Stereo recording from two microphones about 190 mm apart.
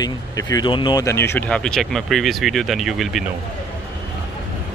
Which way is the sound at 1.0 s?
15° left (ahead or behind).